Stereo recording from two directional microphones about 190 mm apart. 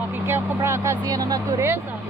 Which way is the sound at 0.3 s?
15° right (ahead or behind).